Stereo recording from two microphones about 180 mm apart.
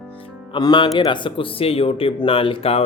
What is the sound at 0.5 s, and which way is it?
Speech, 25° left (ahead or behind).